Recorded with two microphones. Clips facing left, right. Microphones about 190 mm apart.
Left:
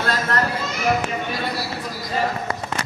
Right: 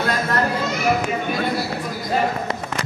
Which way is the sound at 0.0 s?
10° right (ahead or behind).